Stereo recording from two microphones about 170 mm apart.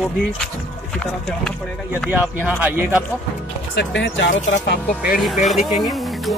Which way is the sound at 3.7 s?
90° left.